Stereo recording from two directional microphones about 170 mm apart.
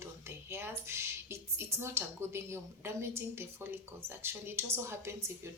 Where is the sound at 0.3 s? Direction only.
15° right (ahead or behind).